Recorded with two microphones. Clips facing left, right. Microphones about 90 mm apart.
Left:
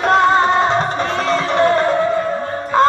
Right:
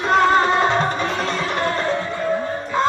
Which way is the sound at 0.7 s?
40° left (ahead or behind).